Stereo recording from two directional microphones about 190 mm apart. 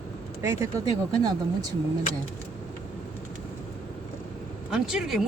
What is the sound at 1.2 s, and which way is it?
Speech, 20° right (ahead or behind).